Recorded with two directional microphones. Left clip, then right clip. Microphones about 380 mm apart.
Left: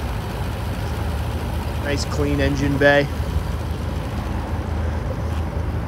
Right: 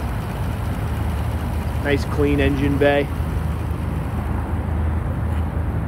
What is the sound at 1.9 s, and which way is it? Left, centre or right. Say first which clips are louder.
Speech: right 4 dB; centre.